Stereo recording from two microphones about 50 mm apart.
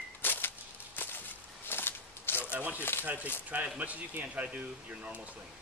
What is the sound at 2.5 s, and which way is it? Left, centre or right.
Speech, right.